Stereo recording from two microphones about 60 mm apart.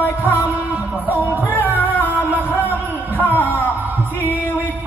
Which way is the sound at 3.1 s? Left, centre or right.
Left.